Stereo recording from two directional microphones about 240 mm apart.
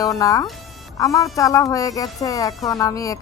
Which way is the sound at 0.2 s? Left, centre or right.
Centre.